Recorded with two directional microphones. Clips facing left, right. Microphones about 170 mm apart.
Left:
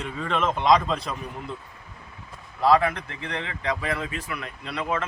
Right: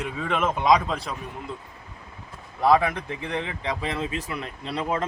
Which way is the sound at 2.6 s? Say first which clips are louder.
Even; 20° right (ahead or behind).